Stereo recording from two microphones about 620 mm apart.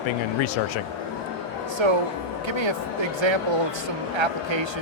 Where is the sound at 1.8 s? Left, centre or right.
Right.